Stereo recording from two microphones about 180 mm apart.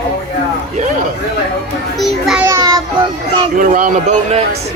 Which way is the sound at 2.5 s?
20° right (ahead or behind).